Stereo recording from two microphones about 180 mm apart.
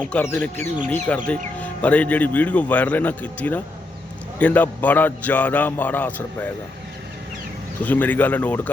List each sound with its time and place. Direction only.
0.0 s speech: 10° left (ahead or behind)
7.8 s speech: 10° left (ahead or behind)